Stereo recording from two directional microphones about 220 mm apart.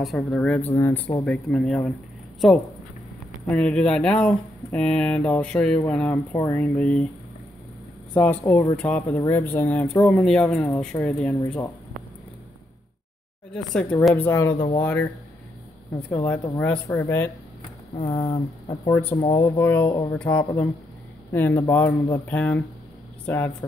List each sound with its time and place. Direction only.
0.0 s speech: centre (ahead or behind)
8.2 s speech: 10° left (ahead or behind)
13.5 s speech: 5° left (ahead or behind)
16.3 s speech: 5° left (ahead or behind)
17.9 s speech: 25° left (ahead or behind)
19.3 s speech: 10° left (ahead or behind)
19.9 s speech: 20° left (ahead or behind)
20.2 s speech: 5° left (ahead or behind)